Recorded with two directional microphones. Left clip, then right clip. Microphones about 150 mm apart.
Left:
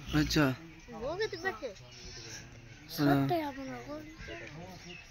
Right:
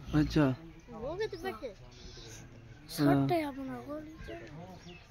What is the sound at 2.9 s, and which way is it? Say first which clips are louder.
A child's voice: right 1 dB; 45° right (ahead or behind).